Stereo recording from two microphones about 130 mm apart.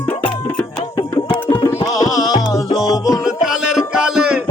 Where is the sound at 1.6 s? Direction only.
20° left (ahead or behind).